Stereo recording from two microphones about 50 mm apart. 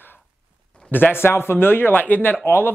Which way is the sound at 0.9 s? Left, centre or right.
Left.